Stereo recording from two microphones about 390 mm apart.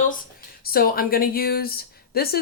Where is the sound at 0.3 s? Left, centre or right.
Left.